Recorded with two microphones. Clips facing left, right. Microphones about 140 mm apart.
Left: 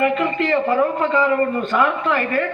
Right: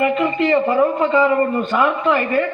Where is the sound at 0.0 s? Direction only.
10° right (ahead or behind).